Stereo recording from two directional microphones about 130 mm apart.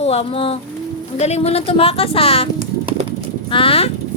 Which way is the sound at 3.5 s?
45° left (ahead or behind).